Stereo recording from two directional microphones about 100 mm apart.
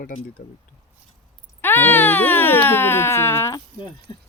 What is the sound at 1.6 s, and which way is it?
Speech, 20° left (ahead or behind).